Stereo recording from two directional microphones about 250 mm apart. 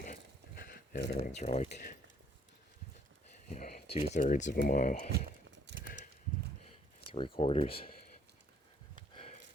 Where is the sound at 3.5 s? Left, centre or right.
Left.